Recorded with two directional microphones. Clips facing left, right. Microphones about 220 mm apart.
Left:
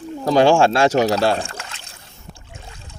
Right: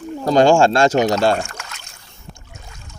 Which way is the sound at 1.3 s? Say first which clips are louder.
Right 1 dB; 30° left (ahead or behind).